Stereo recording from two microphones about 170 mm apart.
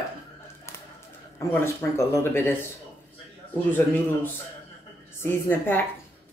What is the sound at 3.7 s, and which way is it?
Speech, 10° left (ahead or behind).